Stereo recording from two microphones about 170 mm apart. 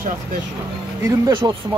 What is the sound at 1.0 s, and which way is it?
Speech, 20° right (ahead or behind).